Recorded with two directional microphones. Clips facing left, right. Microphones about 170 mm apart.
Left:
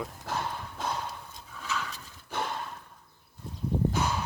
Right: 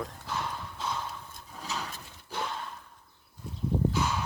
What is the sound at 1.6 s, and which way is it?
Horse, 40° right (ahead or behind).